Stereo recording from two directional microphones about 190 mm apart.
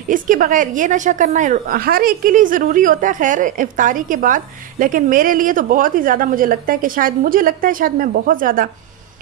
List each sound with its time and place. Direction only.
0.1 s a woman's voice: 45° right (ahead or behind)